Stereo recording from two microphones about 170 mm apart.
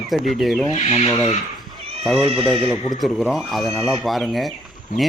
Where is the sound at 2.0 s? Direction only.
Centre (ahead or behind).